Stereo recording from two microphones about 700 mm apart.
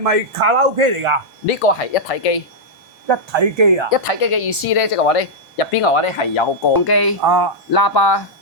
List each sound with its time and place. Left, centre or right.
0.0 s speech: right
1.5 s speech: left
3.1 s speech: right
3.8 s speech: left
6.8 s speech: left
7.3 s speech: right
7.7 s speech: left